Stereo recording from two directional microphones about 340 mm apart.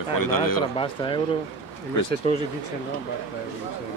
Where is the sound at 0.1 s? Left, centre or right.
Left.